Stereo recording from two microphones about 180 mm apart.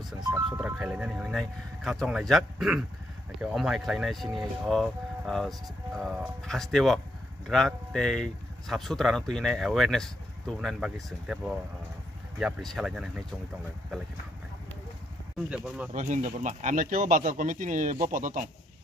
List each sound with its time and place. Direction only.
0.3 s speech: 5° right (ahead or behind)
15.5 s speech: 5° right (ahead or behind)
15.9 s speech: 45° right (ahead or behind)